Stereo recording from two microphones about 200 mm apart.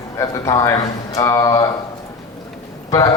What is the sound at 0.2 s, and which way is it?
A man's voice, 15° left (ahead or behind).